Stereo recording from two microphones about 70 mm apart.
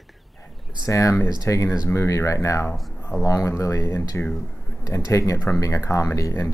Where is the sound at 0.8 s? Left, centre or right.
Left.